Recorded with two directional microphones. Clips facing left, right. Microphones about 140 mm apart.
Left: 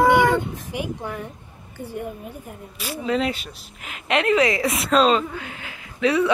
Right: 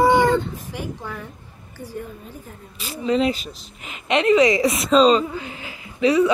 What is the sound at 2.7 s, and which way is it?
Speech, centre (ahead or behind).